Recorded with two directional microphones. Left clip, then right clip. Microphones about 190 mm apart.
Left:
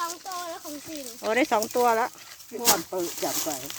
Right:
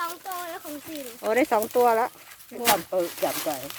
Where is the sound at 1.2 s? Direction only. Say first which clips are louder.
Right 1 dB; 5° left (ahead or behind).